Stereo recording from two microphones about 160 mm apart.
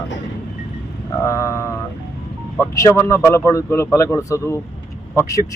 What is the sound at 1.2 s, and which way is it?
Speech, 20° left (ahead or behind).